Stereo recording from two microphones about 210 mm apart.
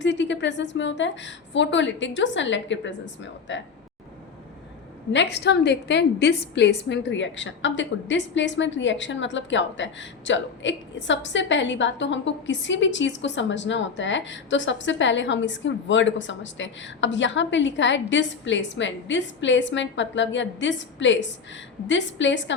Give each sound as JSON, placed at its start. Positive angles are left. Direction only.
{"t": 0.0, "sound": "a woman's voice", "side_deg": 60}
{"t": 5.1, "sound": "a woman's voice", "side_deg": 55}